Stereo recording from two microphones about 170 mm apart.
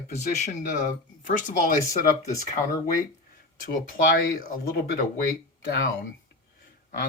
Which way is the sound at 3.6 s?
55° left (ahead or behind).